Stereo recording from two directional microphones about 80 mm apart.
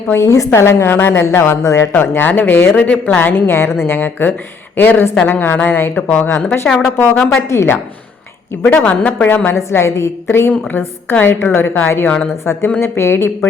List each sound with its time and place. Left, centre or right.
0.1 s a woman's voice: left
1.9 s a woman's voice: left
6.7 s speech: centre
7.4 s a woman's voice: left
8.6 s a woman's voice: centre
12.0 s speech: centre
12.8 s a woman's voice: left